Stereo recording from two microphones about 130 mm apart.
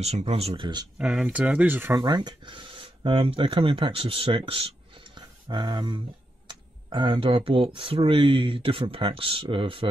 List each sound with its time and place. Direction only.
0.0 s speech: 55° right (ahead or behind)
0.9 s speech: 5° right (ahead or behind)
2.0 s speech: 30° right (ahead or behind)